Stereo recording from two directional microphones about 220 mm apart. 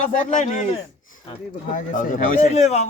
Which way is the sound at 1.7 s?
35° left (ahead or behind).